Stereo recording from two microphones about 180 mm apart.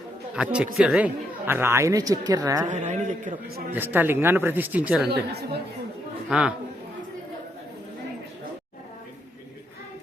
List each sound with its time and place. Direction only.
0.3 s speech: 5° right (ahead or behind)
2.6 s a woman's voice: 40° right (ahead or behind)
3.7 s speech: 10° right (ahead or behind)
5.0 s speech: 65° right (ahead or behind)
6.2 s a man's voice: 5° right (ahead or behind)